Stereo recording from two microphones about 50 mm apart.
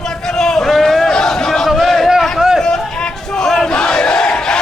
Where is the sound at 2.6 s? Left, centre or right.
Centre.